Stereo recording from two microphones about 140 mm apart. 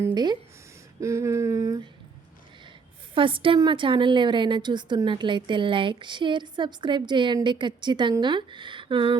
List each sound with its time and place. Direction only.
0.1 s speech: 30° right (ahead or behind)
1.0 s a sound: 20° right (ahead or behind)
3.2 s a woman's voice: 40° right (ahead or behind)